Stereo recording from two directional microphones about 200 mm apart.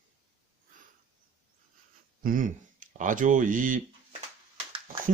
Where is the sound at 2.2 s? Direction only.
40° right (ahead or behind).